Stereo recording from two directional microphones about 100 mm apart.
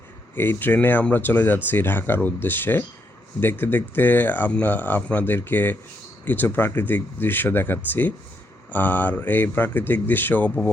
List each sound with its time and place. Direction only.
0.3 s speech: 20° left (ahead or behind)